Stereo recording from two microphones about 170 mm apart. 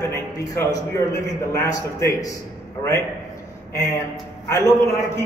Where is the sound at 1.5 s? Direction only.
20° left (ahead or behind).